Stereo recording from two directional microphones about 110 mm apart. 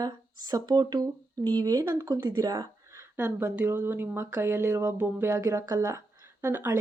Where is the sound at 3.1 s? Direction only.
20° right (ahead or behind).